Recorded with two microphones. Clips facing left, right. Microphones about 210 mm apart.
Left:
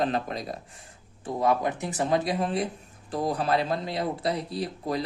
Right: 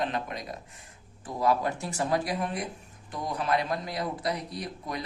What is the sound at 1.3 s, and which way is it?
Speech, 20° left (ahead or behind).